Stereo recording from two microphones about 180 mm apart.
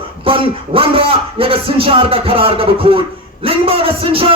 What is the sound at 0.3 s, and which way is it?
A man's voice, 30° right (ahead or behind).